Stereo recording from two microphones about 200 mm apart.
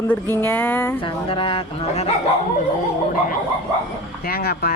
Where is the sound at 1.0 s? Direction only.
25° left (ahead or behind).